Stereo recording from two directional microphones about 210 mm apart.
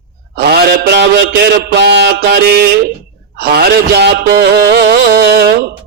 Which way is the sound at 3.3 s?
50° right (ahead or behind).